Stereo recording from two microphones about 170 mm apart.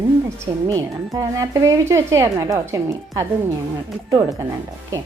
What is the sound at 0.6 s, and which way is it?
A woman's voice, 20° right (ahead or behind).